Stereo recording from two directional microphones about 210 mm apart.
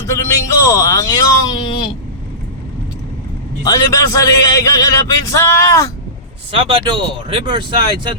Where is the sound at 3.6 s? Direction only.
15° left (ahead or behind).